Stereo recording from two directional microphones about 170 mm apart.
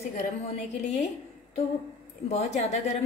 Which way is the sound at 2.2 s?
40° left (ahead or behind).